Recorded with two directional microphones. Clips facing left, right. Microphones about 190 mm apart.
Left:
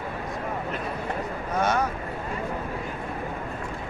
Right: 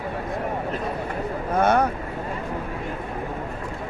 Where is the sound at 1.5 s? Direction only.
60° right (ahead or behind).